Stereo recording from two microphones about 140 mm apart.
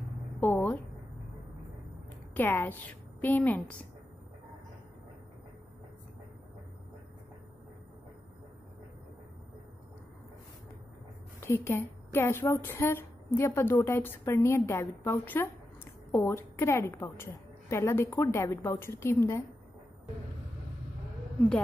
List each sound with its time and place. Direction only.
0.4 s a sound: 15° left (ahead or behind)
2.3 s a woman's voice: 15° left (ahead or behind)
11.4 s a woman's voice: 20° left (ahead or behind)